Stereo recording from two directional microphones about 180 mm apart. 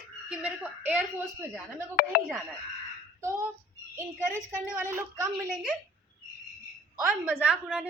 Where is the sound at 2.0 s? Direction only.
55° left (ahead or behind).